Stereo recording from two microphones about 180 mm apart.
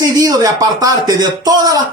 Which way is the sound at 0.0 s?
20° right (ahead or behind).